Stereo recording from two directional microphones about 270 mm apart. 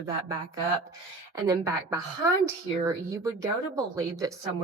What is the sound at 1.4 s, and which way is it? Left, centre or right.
Speech, centre.